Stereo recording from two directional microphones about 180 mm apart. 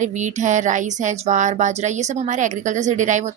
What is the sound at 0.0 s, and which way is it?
Speech, 40° right (ahead or behind).